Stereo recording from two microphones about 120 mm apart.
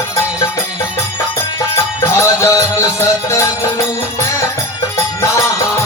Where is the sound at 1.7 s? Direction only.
25° left (ahead or behind).